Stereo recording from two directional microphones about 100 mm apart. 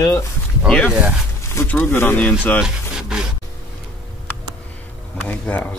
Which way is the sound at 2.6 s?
5° right (ahead or behind).